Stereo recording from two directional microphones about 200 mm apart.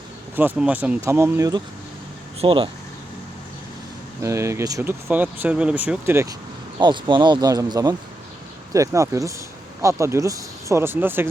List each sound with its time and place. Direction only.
0.3 s speech: 10° right (ahead or behind)
2.4 s speech: 25° right (ahead or behind)
4.2 s speech: 15° right (ahead or behind)
6.7 s speech: 25° right (ahead or behind)